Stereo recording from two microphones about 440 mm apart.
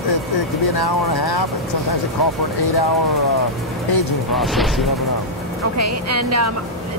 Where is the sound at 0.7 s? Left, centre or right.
Left.